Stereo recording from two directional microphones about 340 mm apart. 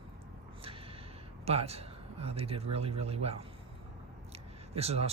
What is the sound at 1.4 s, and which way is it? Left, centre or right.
A man's voice, centre.